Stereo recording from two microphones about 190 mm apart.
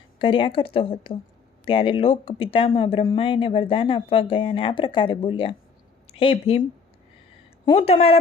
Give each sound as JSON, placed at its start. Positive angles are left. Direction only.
{"t": 0.2, "sound": "speech", "side_deg": 25}